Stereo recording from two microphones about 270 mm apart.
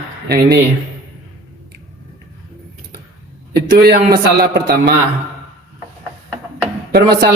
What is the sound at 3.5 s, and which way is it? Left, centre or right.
A man's voice, right.